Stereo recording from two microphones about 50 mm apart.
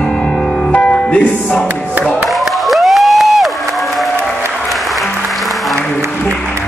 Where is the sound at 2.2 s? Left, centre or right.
Centre.